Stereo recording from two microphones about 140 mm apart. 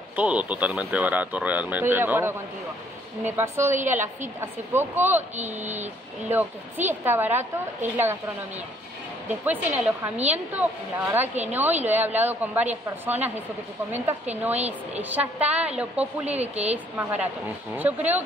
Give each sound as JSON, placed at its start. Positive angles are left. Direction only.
{"t": 0.1, "sound": "speech", "side_deg": -10}
{"t": 3.3, "sound": "speech", "side_deg": -15}
{"t": 5.4, "sound": "speech", "side_deg": -55}
{"t": 6.3, "sound": "speech", "side_deg": -15}
{"t": 14.3, "sound": "speech", "side_deg": -10}
{"t": 16.3, "sound": "speech", "side_deg": -50}
{"t": 17.7, "sound": "speech", "side_deg": -10}